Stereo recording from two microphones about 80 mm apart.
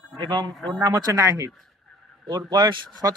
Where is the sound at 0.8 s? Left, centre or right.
Right.